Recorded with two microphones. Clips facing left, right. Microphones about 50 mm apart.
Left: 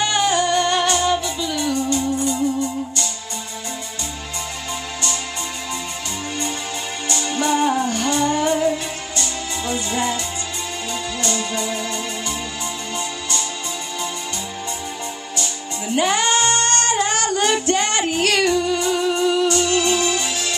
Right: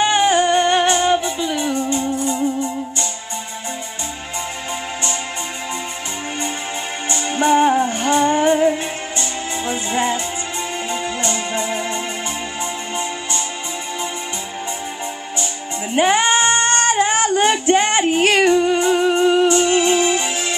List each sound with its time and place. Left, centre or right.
0.0 s music: right
7.1 s music: right
15.9 s female singing: right